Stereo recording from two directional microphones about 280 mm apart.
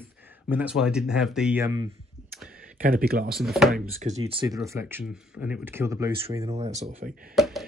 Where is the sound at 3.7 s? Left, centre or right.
Right.